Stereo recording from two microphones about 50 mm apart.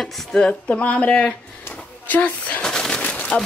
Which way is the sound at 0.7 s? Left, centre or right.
Left.